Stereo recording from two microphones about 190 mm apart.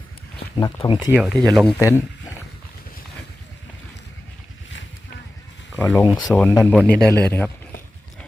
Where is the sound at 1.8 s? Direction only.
15° left (ahead or behind).